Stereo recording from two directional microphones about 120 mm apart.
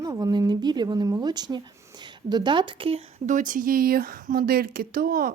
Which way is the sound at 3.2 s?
90° right.